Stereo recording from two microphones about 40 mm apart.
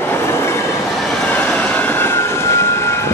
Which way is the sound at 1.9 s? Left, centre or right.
Left.